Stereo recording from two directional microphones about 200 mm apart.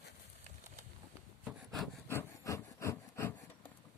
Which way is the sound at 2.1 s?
15° left (ahead or behind).